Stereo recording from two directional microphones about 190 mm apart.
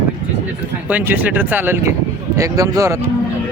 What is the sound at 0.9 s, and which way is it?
Speech, 10° right (ahead or behind).